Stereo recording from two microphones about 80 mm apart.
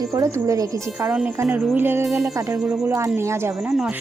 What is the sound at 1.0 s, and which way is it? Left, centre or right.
Speech, centre.